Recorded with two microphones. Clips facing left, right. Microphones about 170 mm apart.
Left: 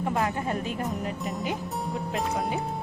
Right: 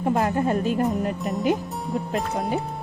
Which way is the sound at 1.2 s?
Centre (ahead or behind).